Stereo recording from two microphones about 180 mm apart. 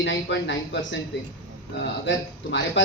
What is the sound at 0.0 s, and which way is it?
Speech, 75° left (ahead or behind).